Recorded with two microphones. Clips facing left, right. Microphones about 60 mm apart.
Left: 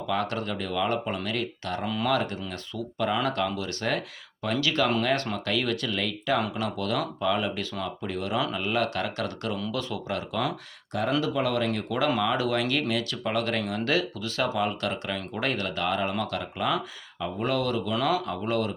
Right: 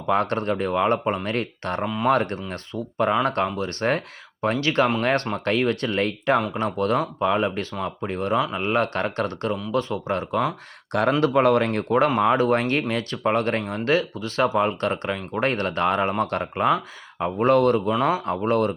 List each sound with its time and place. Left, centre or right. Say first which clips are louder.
0.1 s speech: right 7 dB; right
11.2 s speech: right 8 dB; right
17.9 s speech: right 4 dB; right
18.3 s speech: right 6 dB; right